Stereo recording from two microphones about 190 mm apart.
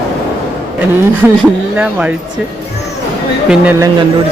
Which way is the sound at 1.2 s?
10° right (ahead or behind).